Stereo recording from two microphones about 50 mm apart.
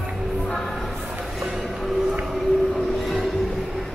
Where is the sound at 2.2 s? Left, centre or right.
Centre.